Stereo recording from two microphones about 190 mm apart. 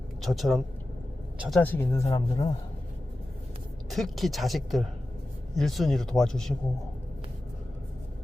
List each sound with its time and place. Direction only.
0.2 s speech: centre (ahead or behind); by 2.5 s 20° left (ahead or behind)
3.8 s speech: centre (ahead or behind)